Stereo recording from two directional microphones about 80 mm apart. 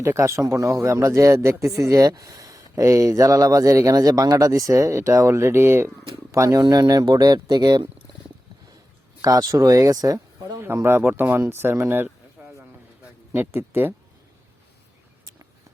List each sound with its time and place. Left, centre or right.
0.0 s speech: right
6.6 s speech: right
9.2 s speech: right
10.8 s speech: right
12.0 s a sound: centre
13.3 s speech: right